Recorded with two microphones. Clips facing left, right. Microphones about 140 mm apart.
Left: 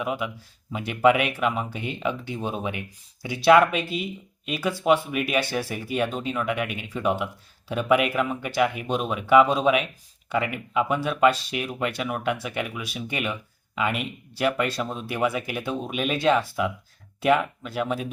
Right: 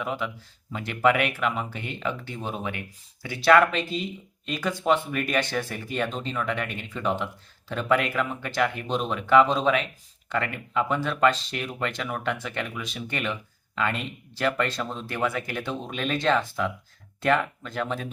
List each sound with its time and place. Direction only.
0.0 s speech: 15° left (ahead or behind)